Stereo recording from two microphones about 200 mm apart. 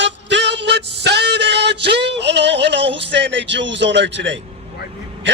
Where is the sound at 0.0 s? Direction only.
60° right (ahead or behind).